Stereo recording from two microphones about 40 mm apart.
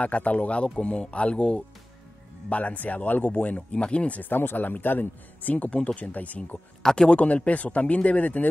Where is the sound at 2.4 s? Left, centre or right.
Left.